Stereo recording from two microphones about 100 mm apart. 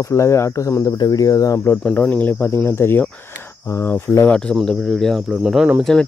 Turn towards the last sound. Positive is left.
turn(degrees=-5)  # may be behind; listen again after turning